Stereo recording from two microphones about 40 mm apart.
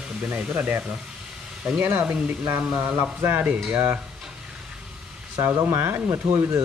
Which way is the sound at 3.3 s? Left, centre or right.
Right.